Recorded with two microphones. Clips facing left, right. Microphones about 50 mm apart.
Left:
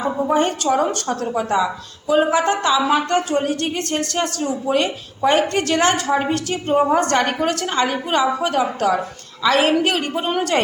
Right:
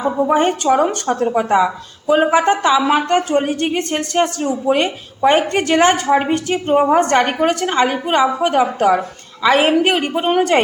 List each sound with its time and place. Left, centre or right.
0.0 s a woman's voice: centre
0.3 s a woman's voice: right